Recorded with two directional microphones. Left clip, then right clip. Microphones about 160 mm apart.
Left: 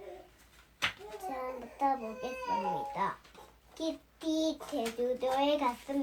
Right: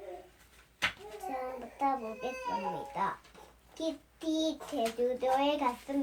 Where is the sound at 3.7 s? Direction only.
10° right (ahead or behind).